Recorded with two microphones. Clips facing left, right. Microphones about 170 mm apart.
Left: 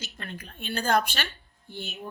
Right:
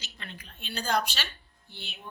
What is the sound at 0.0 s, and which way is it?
A woman's voice, 50° left (ahead or behind).